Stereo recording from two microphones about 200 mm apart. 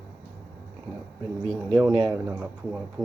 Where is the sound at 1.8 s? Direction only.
20° right (ahead or behind).